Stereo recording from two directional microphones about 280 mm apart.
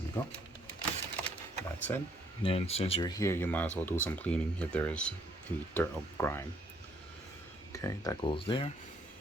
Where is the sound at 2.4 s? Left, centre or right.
Left.